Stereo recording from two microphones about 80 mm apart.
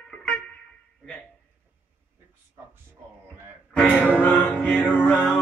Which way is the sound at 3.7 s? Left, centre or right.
Centre.